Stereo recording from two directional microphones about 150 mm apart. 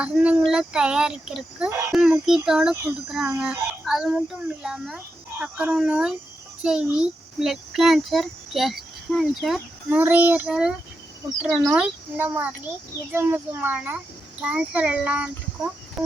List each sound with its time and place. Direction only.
0.0 s a child's voice: 5° right (ahead or behind)
10.0 s a child's voice: 10° right (ahead or behind)
11.7 s a child's voice: 10° right (ahead or behind)